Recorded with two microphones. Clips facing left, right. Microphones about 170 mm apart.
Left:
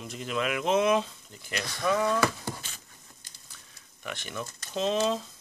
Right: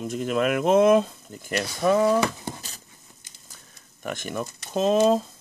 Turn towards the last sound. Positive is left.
turn(degrees=-45)  # may be behind; listen again after turning